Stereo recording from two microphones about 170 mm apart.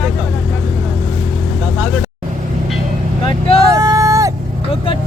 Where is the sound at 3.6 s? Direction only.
20° right (ahead or behind).